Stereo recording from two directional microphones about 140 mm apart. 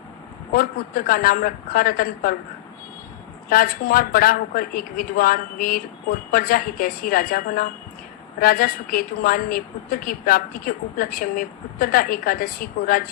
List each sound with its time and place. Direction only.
0.5 s a woman's voice: 90° left
3.5 s a woman's voice: 90° left